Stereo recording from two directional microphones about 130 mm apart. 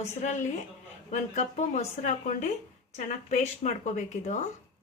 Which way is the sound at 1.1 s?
60° left (ahead or behind).